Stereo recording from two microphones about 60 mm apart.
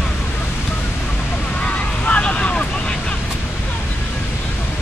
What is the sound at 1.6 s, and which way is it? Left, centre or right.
Vehicle, left.